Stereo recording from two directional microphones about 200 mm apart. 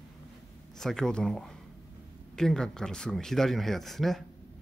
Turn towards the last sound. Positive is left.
turn(degrees=0)  # may be behind; listen again after turning